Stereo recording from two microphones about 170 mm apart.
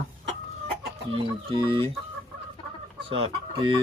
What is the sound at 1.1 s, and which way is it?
Speech, 30° right (ahead or behind).